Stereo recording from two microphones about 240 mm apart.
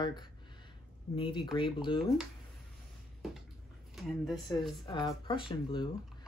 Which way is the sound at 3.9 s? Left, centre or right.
Centre.